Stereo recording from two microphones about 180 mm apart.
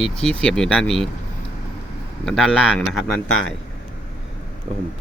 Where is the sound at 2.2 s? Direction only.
Centre (ahead or behind).